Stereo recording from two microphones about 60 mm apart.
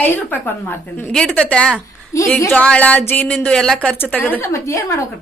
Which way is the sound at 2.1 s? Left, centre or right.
Left.